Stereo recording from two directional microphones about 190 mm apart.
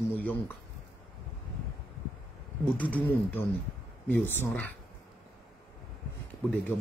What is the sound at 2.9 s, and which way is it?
Speech, 10° left (ahead or behind).